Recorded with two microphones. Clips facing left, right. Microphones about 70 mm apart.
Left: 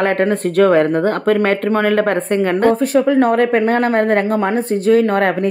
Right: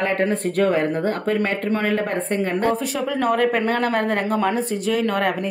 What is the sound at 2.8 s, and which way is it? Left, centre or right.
A woman's voice, left.